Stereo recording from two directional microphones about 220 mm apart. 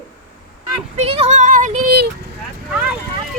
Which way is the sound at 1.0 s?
30° right (ahead or behind).